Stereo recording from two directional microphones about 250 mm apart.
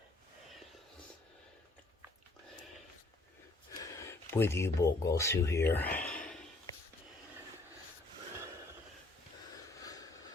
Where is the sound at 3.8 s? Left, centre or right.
Centre.